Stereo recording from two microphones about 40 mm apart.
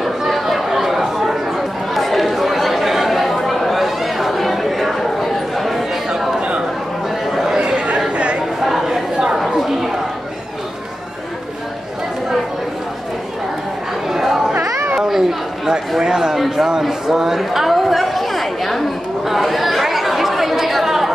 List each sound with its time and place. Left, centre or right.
0.3 s chatter: centre
6.0 s a sound: centre
7.2 s chatter: centre
7.5 s chatter: right
8.6 s chatter: centre
14.0 s chatter: centre
16.0 s a sound: centre
19.2 s chatter: centre